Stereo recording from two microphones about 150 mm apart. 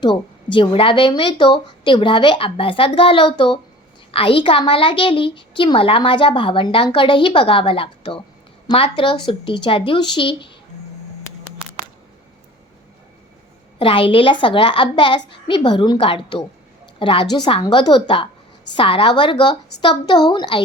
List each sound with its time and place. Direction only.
0.5 s a woman's voice: 35° left (ahead or behind)
13.7 s a woman's voice: 35° left (ahead or behind)